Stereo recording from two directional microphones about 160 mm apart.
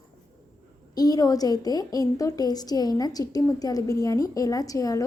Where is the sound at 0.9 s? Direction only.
25° left (ahead or behind).